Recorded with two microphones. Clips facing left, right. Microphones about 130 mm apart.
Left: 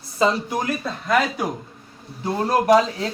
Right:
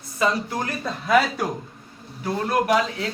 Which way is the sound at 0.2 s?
25° left (ahead or behind).